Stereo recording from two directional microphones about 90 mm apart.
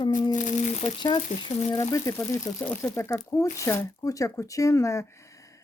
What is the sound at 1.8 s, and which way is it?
Speech, 40° left (ahead or behind).